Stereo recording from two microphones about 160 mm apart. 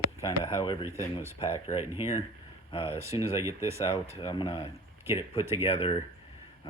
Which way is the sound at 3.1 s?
20° right (ahead or behind).